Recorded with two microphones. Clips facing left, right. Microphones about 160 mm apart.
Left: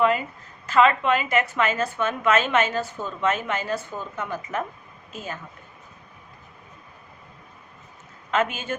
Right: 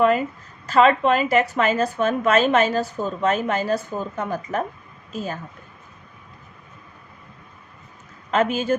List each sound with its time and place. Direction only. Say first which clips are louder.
0.7 s a woman's voice: right 3 dB; 35° right (ahead or behind)
8.3 s a woman's voice: right 5 dB; 35° right (ahead or behind)